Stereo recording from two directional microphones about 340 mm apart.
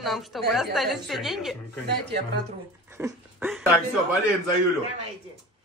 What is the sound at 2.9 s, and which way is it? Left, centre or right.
Speech, centre.